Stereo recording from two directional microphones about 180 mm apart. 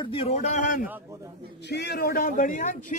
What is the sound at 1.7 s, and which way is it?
Speech, 65° left (ahead or behind).